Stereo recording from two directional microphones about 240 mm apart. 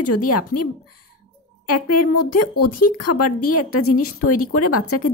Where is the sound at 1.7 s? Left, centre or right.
Left.